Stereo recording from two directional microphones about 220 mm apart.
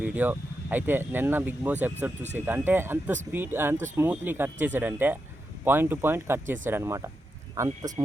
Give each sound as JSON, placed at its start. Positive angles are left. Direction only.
{"t": 0.0, "sound": "speech", "side_deg": -5}